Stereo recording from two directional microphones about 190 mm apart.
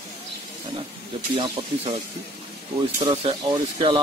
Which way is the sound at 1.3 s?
30° right (ahead or behind).